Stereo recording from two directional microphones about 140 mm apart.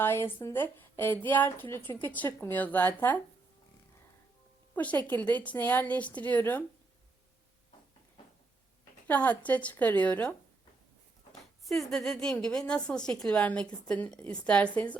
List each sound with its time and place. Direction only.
0.0 s a woman's voice: 15° left (ahead or behind)
4.7 s a woman's voice: 10° left (ahead or behind)
8.8 s speech: 10° left (ahead or behind)
11.3 s a sound: centre (ahead or behind)
11.9 s a woman's voice: centre (ahead or behind)